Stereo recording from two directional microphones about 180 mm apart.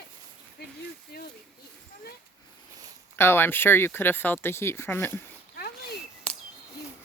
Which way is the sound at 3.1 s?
15° left (ahead or behind).